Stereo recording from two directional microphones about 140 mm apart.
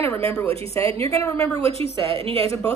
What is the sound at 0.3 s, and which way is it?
A woman's voice, 20° left (ahead or behind).